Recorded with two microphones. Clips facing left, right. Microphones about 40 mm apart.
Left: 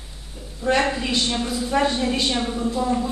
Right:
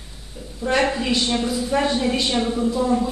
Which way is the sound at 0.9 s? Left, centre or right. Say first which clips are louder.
Right 2 dB; centre.